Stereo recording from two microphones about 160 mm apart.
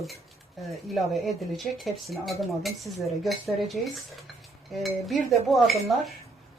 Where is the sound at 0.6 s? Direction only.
Centre (ahead or behind).